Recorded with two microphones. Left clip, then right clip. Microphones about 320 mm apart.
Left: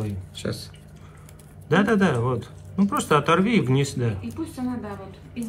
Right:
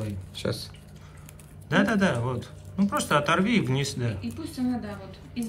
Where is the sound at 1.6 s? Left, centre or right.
Centre.